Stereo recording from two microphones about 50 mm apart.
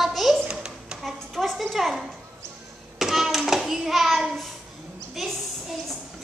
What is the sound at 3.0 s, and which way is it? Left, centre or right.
Hands, centre.